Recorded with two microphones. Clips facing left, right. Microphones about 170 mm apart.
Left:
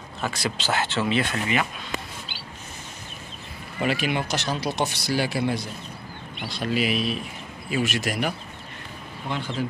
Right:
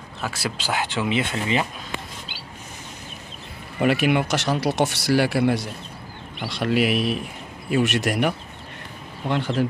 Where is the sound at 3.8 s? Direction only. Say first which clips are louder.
Right 5 dB; 60° right (ahead or behind).